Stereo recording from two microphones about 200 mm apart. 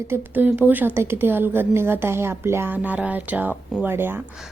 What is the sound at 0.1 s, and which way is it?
Speech, 10° right (ahead or behind).